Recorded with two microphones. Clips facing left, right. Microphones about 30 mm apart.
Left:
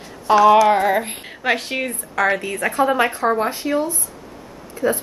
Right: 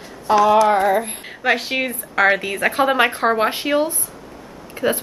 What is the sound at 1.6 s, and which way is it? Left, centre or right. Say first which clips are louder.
A woman's voice: right 2 dB; centre.